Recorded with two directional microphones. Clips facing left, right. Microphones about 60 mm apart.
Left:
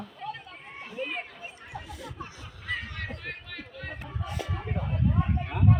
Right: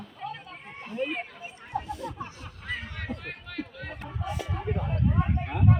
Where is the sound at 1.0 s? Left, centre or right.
Centre.